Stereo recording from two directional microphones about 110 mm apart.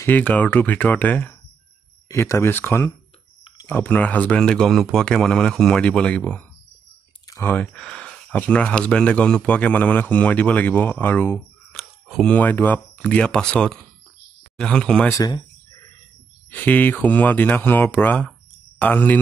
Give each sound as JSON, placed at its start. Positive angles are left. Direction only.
{"t": 0.0, "sound": "speech", "side_deg": 15}
{"t": 2.0, "sound": "speech", "side_deg": 25}
{"t": 11.7, "sound": "a sound", "side_deg": 0}
{"t": 12.3, "sound": "speech", "side_deg": 15}
{"t": 15.0, "sound": "speech", "side_deg": 30}
{"t": 16.4, "sound": "speech", "side_deg": 15}